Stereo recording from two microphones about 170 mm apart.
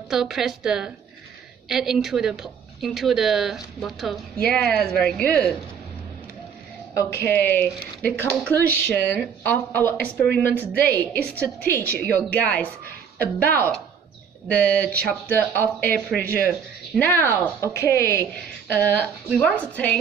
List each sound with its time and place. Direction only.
0.1 s a woman's voice: centre (ahead or behind)
6.9 s speech: 15° left (ahead or behind)
16.2 s speech: 60° left (ahead or behind)
16.4 s speech: 5° left (ahead or behind)